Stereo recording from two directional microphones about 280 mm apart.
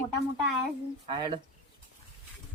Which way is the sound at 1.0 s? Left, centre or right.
Centre.